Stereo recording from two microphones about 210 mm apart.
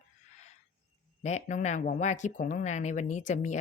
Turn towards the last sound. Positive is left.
turn(degrees=35)  # may be behind; listen again after turning